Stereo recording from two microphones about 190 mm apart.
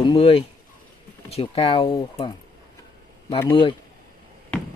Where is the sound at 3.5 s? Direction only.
25° left (ahead or behind).